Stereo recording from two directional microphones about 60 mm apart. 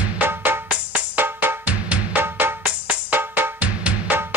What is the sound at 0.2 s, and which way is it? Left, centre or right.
Music, right.